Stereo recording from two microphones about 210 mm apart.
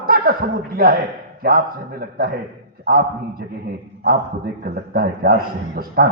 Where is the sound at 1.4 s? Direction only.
45° right (ahead or behind).